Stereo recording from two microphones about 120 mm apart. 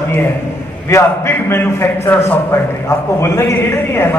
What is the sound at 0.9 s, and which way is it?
A man's voice, 20° left (ahead or behind).